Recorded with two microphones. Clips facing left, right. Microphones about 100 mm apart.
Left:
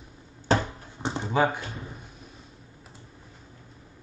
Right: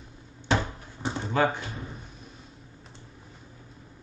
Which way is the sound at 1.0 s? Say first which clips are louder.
Left 1 dB; 20° left (ahead or behind).